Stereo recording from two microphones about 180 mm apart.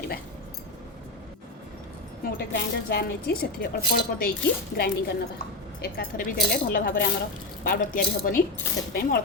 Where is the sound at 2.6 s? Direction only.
60° left (ahead or behind).